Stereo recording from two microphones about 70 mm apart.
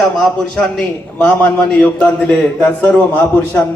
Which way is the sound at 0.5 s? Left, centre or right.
Centre.